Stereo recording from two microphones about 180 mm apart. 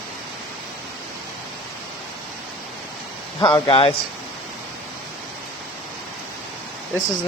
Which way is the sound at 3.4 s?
30° left (ahead or behind).